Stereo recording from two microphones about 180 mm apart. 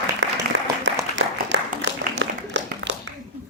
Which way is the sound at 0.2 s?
85° right.